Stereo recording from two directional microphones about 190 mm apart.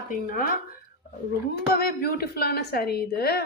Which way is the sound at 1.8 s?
55° left (ahead or behind).